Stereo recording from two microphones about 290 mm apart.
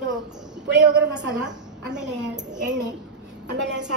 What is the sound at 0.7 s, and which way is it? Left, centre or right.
A woman's voice, right.